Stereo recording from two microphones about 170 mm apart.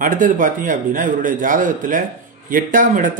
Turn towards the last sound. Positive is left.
turn(degrees=-50)  # may be behind; listen again after turning